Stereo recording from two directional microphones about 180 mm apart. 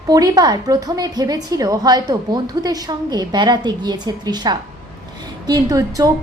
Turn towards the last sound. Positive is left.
turn(degrees=-20)  # may be behind; listen again after turning